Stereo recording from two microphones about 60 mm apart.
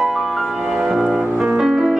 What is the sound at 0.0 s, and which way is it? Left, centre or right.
Music, centre.